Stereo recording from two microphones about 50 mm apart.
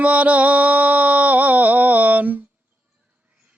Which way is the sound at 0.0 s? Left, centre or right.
Right.